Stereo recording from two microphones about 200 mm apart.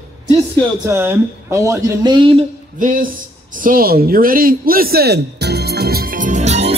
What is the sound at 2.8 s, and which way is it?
Speech, 40° right (ahead or behind).